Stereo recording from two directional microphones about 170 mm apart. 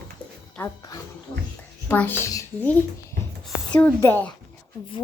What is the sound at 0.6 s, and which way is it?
A woman's voice, 20° left (ahead or behind).